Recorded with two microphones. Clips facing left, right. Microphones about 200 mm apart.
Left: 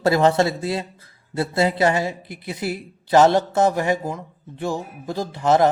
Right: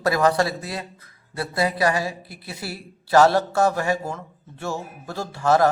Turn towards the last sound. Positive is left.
turn(degrees=20)  # may be behind; listen again after turning